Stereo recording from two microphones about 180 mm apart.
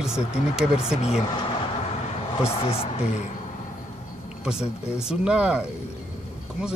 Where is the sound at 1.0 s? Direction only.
30° left (ahead or behind).